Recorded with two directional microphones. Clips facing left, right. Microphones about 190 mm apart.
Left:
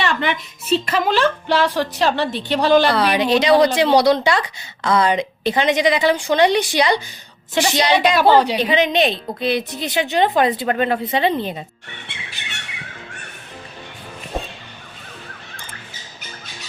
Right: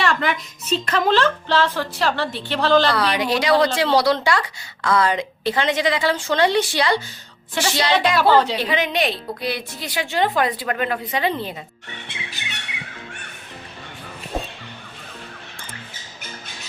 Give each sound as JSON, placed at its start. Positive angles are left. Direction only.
{"t": 0.0, "sound": "a woman's voice", "side_deg": 0}